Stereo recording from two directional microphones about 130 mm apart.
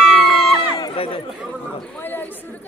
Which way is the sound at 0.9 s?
45° left (ahead or behind).